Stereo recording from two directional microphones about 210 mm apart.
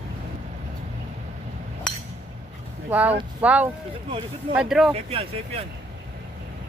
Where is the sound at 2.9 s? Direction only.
5° right (ahead or behind).